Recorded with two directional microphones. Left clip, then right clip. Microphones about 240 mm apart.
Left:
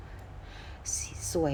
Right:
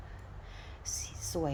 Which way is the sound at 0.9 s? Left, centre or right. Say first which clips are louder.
Left 4 dB; right.